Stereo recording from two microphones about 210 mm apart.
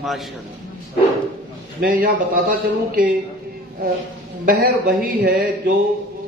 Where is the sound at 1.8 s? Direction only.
40° right (ahead or behind).